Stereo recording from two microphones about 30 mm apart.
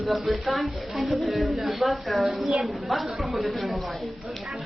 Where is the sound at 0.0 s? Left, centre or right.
Centre.